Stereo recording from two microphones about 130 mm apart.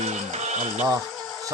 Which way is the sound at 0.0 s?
60° right (ahead or behind).